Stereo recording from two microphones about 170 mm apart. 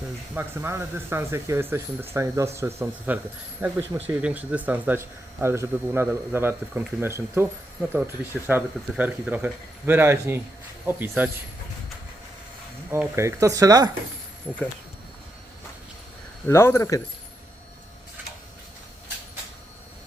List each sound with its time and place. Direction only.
0.3 s a man's voice: 15° right (ahead or behind)
12.9 s speech: 15° right (ahead or behind)
16.5 s speech: 15° left (ahead or behind)